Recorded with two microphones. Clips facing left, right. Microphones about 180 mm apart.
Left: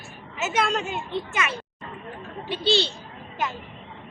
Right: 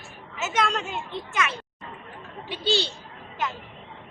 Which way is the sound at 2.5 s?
10° right (ahead or behind).